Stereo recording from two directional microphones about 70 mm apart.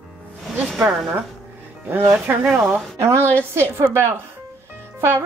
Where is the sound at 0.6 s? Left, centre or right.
Centre.